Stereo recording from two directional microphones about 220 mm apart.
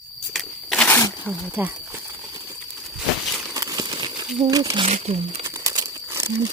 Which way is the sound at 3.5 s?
15° right (ahead or behind).